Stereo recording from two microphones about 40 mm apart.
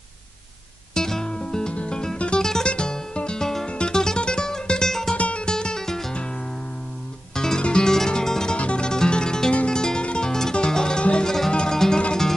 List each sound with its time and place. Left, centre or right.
0.9 s music: centre
2.4 s guitar: centre
2.7 s music: left
5.1 s music: left
5.5 s music: centre
7.3 s music: centre
8.5 s music: left
8.8 s music: centre